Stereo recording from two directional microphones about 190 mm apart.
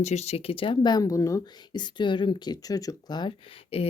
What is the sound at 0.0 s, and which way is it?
Speech, 35° left (ahead or behind).